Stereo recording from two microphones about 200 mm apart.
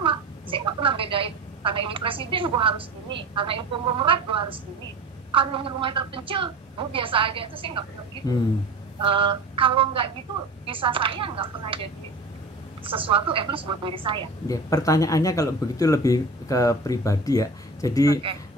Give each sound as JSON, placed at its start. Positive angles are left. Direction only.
{"t": 0.0, "sound": "a sound", "side_deg": -25}
{"t": 3.3, "sound": "a woman's voice", "side_deg": -25}
{"t": 9.0, "sound": "a woman's voice", "side_deg": -25}
{"t": 14.5, "sound": "speech", "side_deg": 15}